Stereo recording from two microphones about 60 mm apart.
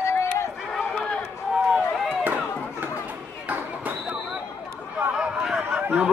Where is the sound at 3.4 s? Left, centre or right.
Right.